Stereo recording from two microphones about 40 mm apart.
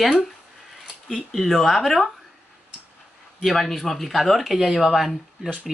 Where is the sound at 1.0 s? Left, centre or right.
Centre.